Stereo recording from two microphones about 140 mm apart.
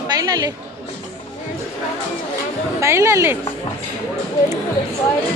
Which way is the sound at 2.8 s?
20° right (ahead or behind).